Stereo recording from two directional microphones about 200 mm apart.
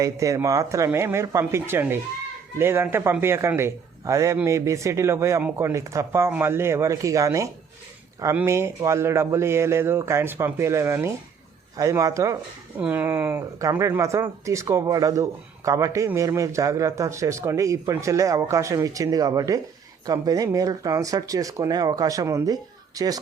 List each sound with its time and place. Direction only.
0.0 s speech: 15° right (ahead or behind)